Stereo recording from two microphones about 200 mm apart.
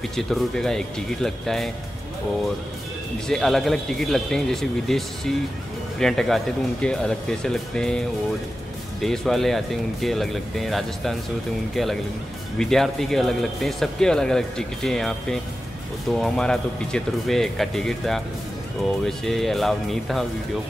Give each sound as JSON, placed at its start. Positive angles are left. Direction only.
{"t": 0.1, "sound": "speech", "side_deg": 0}
{"t": 3.3, "sound": "speech", "side_deg": 0}
{"t": 9.0, "sound": "speech", "side_deg": 0}